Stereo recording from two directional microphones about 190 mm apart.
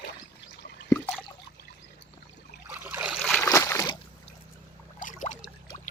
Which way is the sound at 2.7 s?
10° right (ahead or behind).